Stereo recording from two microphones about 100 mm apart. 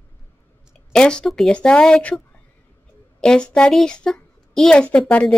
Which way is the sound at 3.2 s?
10° left (ahead or behind).